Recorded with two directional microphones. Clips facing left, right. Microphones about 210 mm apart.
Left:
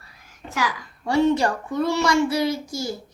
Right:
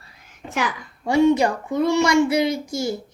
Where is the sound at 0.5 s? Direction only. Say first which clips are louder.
Right 1 dB; 20° right (ahead or behind).